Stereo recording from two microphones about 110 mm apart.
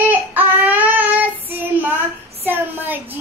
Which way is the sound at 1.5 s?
15° right (ahead or behind).